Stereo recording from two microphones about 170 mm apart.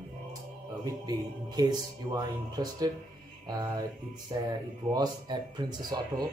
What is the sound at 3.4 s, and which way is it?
Music, 25° right (ahead or behind).